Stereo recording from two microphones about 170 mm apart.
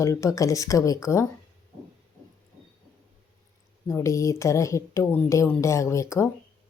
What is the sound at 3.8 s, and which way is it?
Speech, 15° left (ahead or behind).